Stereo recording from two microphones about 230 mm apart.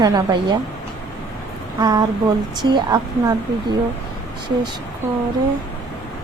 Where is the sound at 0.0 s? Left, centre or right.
Centre.